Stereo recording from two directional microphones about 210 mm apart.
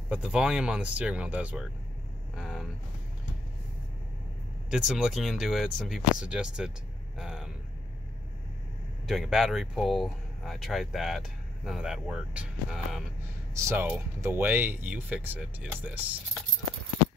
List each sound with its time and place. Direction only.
0.1 s speech: 5° right (ahead or behind)
2.3 s vehicle: centre (ahead or behind)
4.6 s speech: 5° right (ahead or behind)
9.0 s speech: centre (ahead or behind)